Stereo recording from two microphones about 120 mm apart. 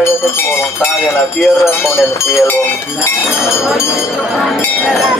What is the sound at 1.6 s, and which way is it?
Speech, 20° left (ahead or behind).